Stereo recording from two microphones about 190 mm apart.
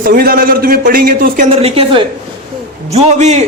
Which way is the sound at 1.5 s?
30° right (ahead or behind).